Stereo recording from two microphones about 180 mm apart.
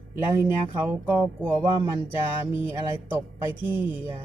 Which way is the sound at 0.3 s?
10° right (ahead or behind).